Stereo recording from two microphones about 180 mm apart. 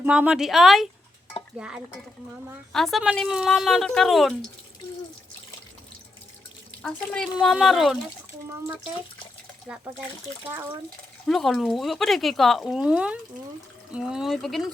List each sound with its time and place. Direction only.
0.0 s speech: 5° right (ahead or behind)
6.8 s speech: 5° left (ahead or behind)
9.7 s speech: 5° right (ahead or behind)
11.3 s speech: centre (ahead or behind)